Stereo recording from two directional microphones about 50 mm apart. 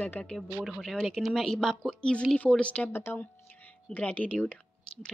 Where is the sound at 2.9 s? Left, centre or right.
Left.